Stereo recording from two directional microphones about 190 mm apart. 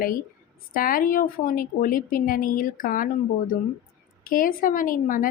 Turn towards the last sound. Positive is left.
turn(degrees=45)  # may be behind; listen again after turning